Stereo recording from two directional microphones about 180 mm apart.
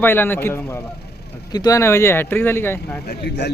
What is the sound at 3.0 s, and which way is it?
Speech, 65° left (ahead or behind).